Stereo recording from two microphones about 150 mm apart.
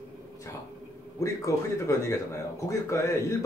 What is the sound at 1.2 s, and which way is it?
Speech, 20° left (ahead or behind).